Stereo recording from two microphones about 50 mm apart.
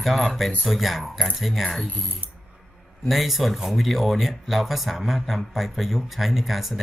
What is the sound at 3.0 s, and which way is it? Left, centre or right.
Speech, centre.